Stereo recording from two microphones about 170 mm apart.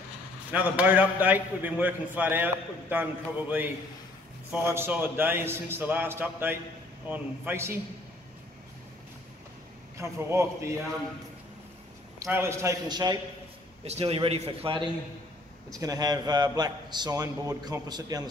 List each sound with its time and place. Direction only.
0.5 s a man's voice: 10° right (ahead or behind)
9.9 s a man's voice: 15° right (ahead or behind)
12.2 s a man's voice: 15° right (ahead or behind)
13.8 s a man's voice: 35° right (ahead or behind)
15.7 s a man's voice: 20° right (ahead or behind)